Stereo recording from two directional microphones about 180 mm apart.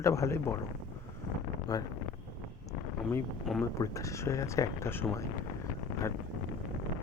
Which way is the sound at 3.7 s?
15° left (ahead or behind).